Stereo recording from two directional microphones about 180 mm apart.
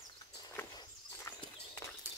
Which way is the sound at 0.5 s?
15° left (ahead or behind).